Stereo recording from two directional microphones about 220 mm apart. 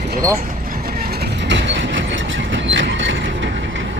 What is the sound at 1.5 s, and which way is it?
Train, 55° right (ahead or behind).